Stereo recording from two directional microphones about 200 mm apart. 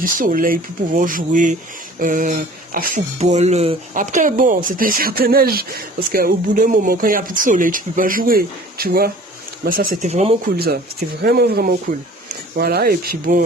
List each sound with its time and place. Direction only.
0.0 s speech: 45° right (ahead or behind)
10.1 s speech: 35° right (ahead or behind)
11.2 s speech: 50° right (ahead or behind)